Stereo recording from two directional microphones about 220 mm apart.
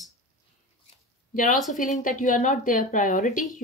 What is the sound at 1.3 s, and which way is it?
A woman's voice, 35° left (ahead or behind).